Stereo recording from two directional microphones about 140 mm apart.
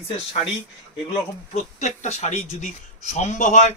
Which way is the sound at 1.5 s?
55° left (ahead or behind).